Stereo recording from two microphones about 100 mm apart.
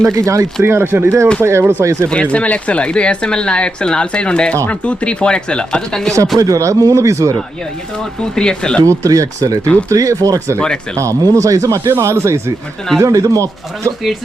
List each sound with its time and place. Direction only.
0.0 s speech: 30° right (ahead or behind)
2.0 s speech: 10° left (ahead or behind)
6.4 s speech: 35° right (ahead or behind)
7.9 s speech: 10° left (ahead or behind)
8.8 s speech: 35° right (ahead or behind)